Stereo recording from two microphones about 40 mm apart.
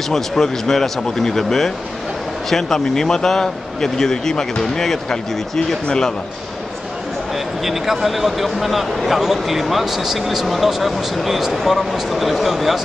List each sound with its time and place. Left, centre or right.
0.1 s speech: centre
7.6 s speech: centre